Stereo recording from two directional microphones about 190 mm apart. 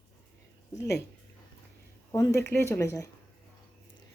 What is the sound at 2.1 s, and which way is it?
Speech, 15° left (ahead or behind).